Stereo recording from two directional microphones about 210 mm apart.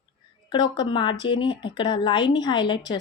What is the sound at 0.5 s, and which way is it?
Speech, 20° left (ahead or behind).